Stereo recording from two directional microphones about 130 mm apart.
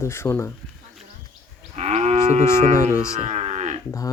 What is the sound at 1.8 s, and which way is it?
Moo, 55° right (ahead or behind).